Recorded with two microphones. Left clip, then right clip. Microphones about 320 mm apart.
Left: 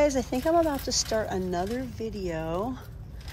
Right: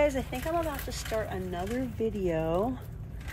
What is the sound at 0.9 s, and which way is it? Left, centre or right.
Speech, centre.